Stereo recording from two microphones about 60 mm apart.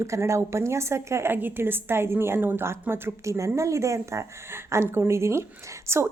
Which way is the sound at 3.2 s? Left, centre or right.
Right.